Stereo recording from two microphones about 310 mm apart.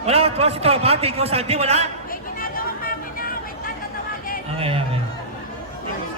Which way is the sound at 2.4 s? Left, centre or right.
Left.